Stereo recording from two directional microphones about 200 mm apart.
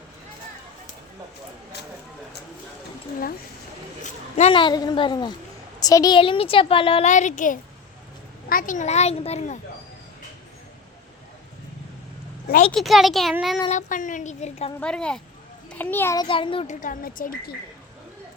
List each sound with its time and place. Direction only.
4.0 s a woman's voice: 35° left (ahead or behind)
12.7 s a child's voice: centre (ahead or behind)
13.7 s a child's voice: 40° left (ahead or behind)
14.8 s a child's voice: 5° left (ahead or behind)
16.2 s a woman's voice: 25° left (ahead or behind)
16.8 s a woman's voice: 45° left (ahead or behind)